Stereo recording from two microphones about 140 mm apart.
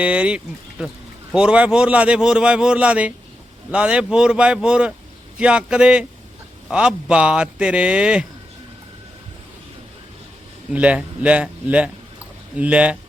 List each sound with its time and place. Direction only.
0.0 s a man's voice: 10° right (ahead or behind)
10.7 s a man's voice: 10° right (ahead or behind)